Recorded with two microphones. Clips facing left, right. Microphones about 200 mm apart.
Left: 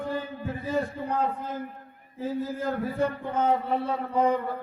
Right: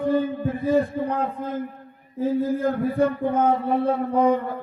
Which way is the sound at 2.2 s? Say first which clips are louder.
Right 8 dB; 55° right (ahead or behind).